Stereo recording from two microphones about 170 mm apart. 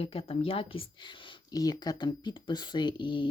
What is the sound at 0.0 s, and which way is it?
Speech, 35° left (ahead or behind).